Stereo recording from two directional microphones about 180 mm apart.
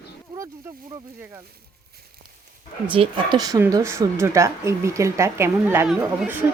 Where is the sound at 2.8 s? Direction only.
30° right (ahead or behind).